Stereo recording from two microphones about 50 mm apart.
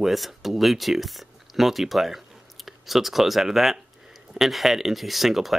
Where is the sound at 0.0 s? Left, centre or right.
Centre.